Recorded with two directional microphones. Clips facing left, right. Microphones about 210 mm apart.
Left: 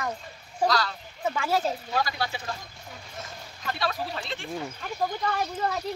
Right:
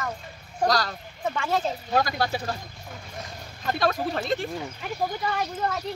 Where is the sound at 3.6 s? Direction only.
45° right (ahead or behind).